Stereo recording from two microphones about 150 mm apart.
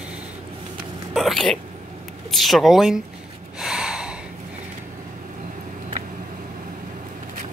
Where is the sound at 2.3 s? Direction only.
Centre (ahead or behind).